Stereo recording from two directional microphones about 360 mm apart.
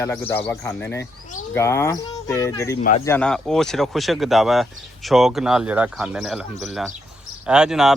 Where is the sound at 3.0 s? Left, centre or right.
Centre.